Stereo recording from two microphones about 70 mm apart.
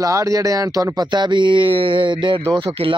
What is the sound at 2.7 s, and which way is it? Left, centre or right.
Speech, right.